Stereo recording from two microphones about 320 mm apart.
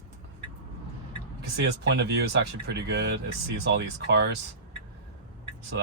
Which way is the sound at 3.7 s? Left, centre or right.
Right.